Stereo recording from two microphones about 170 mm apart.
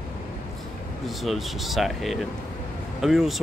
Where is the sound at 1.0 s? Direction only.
Centre (ahead or behind).